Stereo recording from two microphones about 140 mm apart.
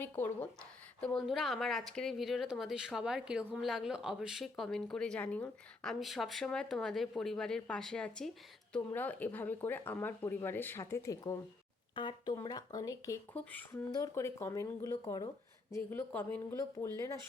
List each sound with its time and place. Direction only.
0.0 s speech: 15° left (ahead or behind)
1.0 s speech: centre (ahead or behind); by 13.1 s 25° left (ahead or behind)
13.3 s speech: 10° left (ahead or behind)
13.9 s speech: 20° left (ahead or behind)
15.7 s speech: 15° left (ahead or behind)